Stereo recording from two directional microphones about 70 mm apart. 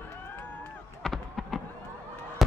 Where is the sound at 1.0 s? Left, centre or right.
Centre.